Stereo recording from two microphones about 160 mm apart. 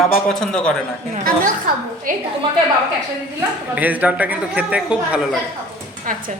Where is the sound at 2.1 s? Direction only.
60° right (ahead or behind).